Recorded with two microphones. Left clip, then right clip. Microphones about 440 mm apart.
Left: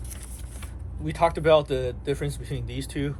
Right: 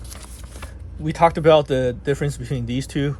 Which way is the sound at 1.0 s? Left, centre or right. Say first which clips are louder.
Right 6 dB; centre.